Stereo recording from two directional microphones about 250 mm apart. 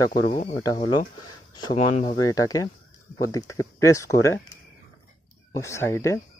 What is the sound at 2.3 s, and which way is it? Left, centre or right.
Speech, centre.